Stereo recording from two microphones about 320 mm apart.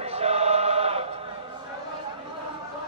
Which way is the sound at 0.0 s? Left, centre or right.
Centre.